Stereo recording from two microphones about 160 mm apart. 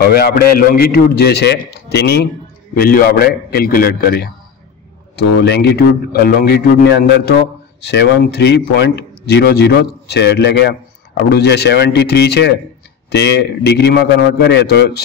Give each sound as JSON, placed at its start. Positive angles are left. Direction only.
{"t": 0.0, "sound": "a man's voice", "side_deg": 80}
{"t": 2.7, "sound": "a man's voice", "side_deg": 65}
{"t": 5.1, "sound": "a man's voice", "side_deg": 90}